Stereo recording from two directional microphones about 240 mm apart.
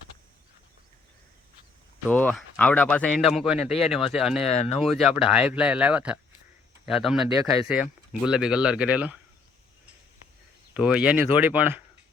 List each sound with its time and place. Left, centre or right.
2.0 s speech: centre
4.4 s speech: left
4.8 s speech: centre
10.8 s speech: centre